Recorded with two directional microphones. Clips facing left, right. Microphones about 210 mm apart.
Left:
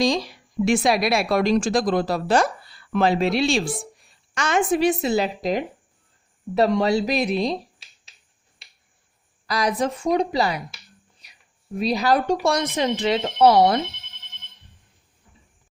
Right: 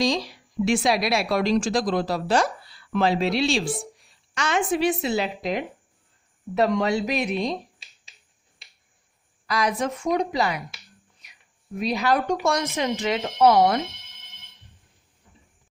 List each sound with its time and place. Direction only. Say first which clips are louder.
0.0 s speech: left 2 dB; 50° left (ahead or behind); by 7.5 s 35° left (ahead or behind)
9.5 s speech: left 2 dB; 35° left (ahead or behind)